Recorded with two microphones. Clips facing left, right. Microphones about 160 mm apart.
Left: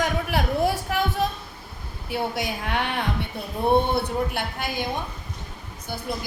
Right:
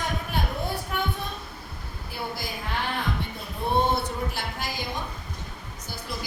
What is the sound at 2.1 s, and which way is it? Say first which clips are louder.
Speech: left 7 dB; 75° left (ahead or behind).